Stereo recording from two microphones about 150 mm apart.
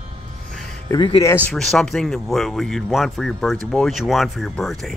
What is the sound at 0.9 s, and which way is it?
Speech, 35° left (ahead or behind).